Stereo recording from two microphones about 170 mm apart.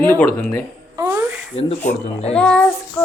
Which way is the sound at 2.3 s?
5° left (ahead or behind).